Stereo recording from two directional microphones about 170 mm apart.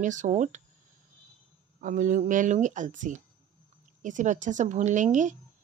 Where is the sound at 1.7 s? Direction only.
50° right (ahead or behind).